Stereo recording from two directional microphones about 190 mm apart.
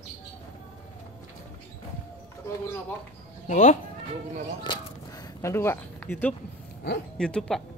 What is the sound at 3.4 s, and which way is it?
Speech, 40° left (ahead or behind).